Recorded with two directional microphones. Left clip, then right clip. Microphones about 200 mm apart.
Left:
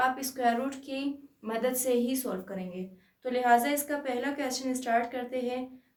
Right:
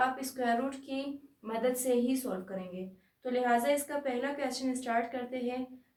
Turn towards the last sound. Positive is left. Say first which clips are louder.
# left 3 dB
turn(degrees=60)  # may be behind; listen again after turning